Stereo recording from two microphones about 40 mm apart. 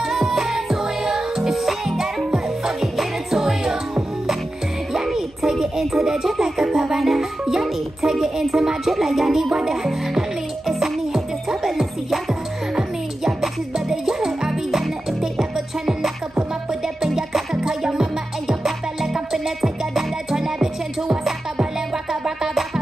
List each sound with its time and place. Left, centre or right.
0.1 s music: centre
2.3 s music: centre
8.9 s speech: centre
10.7 s music: centre
13.4 s music: centre
19.1 s music: centre